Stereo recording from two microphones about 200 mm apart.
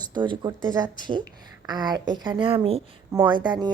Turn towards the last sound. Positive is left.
turn(degrees=-20)  # may be behind; listen again after turning